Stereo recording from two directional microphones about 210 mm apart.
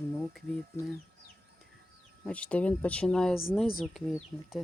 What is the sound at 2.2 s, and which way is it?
Speech, 5° left (ahead or behind).